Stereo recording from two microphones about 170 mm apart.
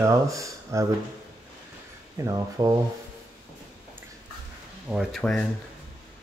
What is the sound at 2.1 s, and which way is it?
Speech, 20° right (ahead or behind).